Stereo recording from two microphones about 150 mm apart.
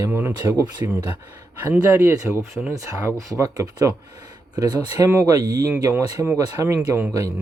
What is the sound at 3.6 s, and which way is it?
Speech, 10° right (ahead or behind).